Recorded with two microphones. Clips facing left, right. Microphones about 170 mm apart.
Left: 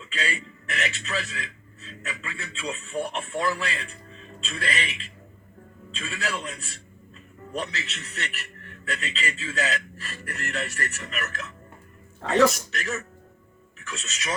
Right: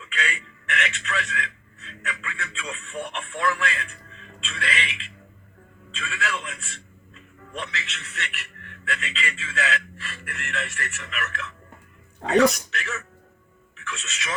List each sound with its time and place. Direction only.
0.0 s a man's voice: 35° left (ahead or behind)
12.7 s a man's voice: 40° left (ahead or behind)